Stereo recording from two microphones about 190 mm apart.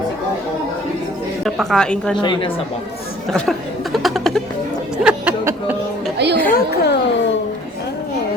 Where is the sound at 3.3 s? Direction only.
Centre (ahead or behind).